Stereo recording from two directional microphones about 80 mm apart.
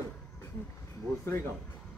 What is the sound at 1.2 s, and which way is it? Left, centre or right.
Speech, left.